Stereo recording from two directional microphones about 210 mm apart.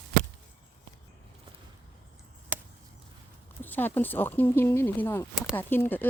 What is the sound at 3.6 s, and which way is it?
Speech, 10° left (ahead or behind).